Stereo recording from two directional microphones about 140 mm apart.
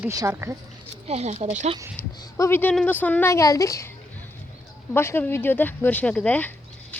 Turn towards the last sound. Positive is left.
turn(degrees=10)  # may be behind; listen again after turning